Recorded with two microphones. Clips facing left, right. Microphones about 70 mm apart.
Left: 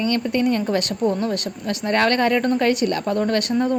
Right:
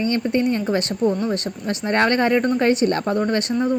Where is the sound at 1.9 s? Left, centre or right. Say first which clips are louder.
Even; right.